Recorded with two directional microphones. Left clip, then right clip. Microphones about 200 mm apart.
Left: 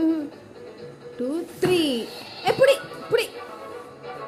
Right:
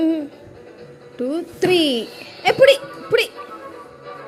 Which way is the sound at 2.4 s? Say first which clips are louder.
Right 6 dB; 15° right (ahead or behind).